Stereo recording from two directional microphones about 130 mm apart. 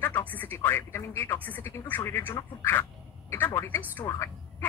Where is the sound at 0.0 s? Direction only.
15° left (ahead or behind).